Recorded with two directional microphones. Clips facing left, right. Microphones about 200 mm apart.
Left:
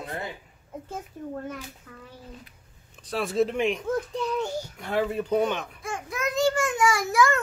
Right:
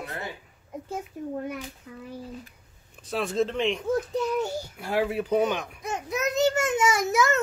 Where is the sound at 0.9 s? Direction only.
10° right (ahead or behind).